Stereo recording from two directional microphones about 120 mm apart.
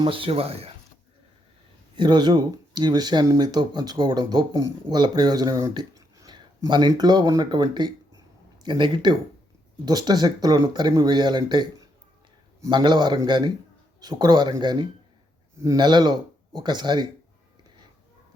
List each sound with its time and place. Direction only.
0.0 s speech: 50° right (ahead or behind)
2.0 s speech: 40° right (ahead or behind)
12.7 s speech: 40° right (ahead or behind)